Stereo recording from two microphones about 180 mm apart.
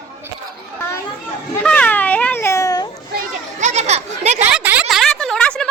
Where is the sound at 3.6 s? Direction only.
40° right (ahead or behind).